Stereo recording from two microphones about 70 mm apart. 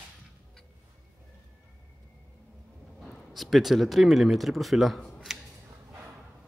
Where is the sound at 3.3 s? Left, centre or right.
Centre.